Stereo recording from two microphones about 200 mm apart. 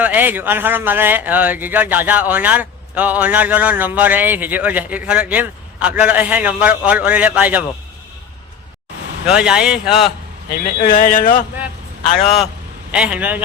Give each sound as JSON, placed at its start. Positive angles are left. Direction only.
{"t": 0.0, "sound": "speech", "side_deg": -10}
{"t": 9.2, "sound": "speech", "side_deg": -5}
{"t": 10.8, "sound": "speech", "side_deg": 45}
{"t": 12.9, "sound": "speech", "side_deg": -5}